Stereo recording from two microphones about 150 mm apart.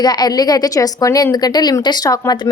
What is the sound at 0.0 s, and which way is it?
Speech, 25° left (ahead or behind).